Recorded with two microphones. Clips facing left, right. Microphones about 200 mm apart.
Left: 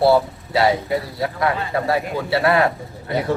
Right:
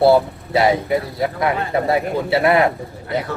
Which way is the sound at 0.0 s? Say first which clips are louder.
Right 2 dB; 20° right (ahead or behind).